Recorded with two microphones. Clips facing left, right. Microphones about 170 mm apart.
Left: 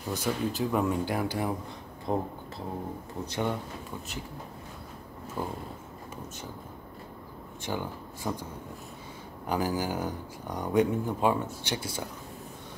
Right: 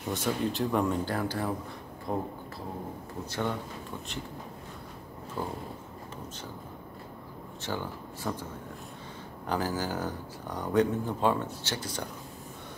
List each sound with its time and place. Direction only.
0.1 s speech: centre (ahead or behind); by 2.2 s 20° left (ahead or behind)
3.3 s speech: 15° left (ahead or behind)
5.4 s speech: 10° left (ahead or behind)
7.6 s speech: 15° left (ahead or behind)
9.5 s speech: 10° left (ahead or behind)